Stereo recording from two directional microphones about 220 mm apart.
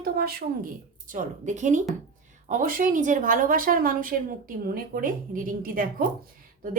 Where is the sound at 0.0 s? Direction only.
45° right (ahead or behind).